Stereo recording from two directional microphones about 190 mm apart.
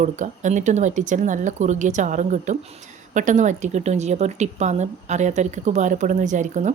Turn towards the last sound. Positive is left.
turn(degrees=-40)  # may be behind; listen again after turning